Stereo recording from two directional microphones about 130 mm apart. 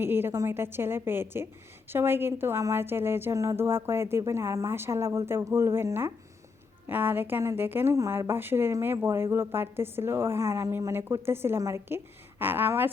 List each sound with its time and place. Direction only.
0.0 s a woman's voice: 15° right (ahead or behind)